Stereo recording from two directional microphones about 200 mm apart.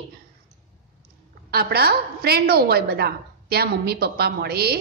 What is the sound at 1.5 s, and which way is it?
A woman's voice, 50° right (ahead or behind).